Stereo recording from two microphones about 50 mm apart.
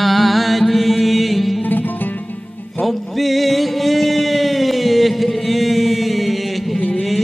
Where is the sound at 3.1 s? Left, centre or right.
Centre.